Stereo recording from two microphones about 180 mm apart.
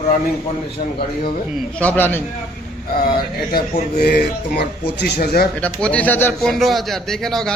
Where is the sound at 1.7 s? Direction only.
10° left (ahead or behind).